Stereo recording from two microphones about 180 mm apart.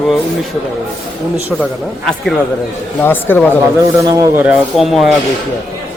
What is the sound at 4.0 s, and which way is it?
Speech, 20° right (ahead or behind).